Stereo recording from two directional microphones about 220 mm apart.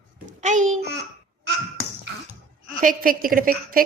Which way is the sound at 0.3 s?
35° right (ahead or behind).